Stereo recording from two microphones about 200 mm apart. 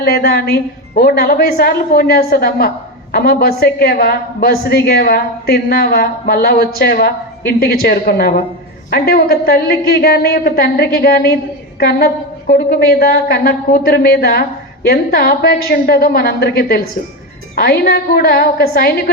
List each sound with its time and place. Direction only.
0.0 s a woman's voice: 50° left (ahead or behind)